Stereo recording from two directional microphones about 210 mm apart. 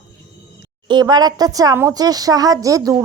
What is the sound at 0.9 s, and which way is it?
Speech, 20° right (ahead or behind).